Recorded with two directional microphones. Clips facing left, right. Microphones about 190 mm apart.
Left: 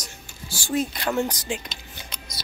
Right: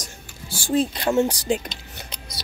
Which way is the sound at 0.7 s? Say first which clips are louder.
Right 4 dB; 30° right (ahead or behind).